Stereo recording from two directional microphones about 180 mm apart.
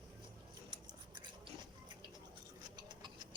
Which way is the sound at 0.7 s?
25° right (ahead or behind).